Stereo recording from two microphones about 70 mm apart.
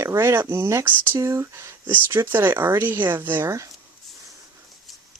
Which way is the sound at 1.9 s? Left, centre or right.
Right.